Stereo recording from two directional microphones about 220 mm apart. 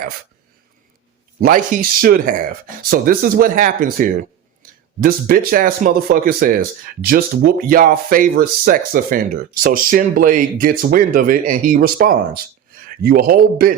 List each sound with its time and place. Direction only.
1.4 s speech: 40° right (ahead or behind)
5.5 s speech: 40° right (ahead or behind)